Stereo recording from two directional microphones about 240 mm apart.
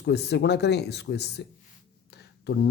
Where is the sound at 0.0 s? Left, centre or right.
Left.